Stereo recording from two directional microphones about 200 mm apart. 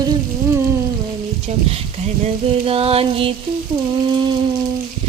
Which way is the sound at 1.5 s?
30° right (ahead or behind).